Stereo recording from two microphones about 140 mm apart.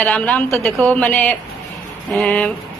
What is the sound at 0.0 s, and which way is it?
A woman's voice, 10° left (ahead or behind).